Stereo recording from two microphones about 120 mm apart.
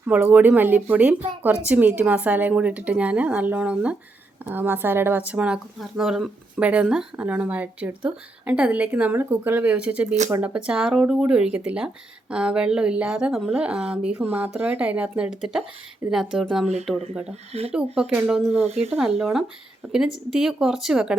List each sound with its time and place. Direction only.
0.1 s speech: 15° right (ahead or behind)
17.7 s speech: 10° right (ahead or behind)
18.5 s speech: 60° right (ahead or behind)
19.2 s speech: 5° right (ahead or behind)